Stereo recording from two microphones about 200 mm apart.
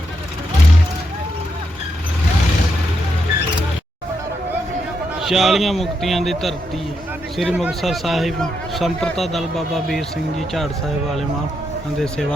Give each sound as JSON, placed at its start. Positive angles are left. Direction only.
{"t": 5.2, "sound": "speech", "side_deg": 0}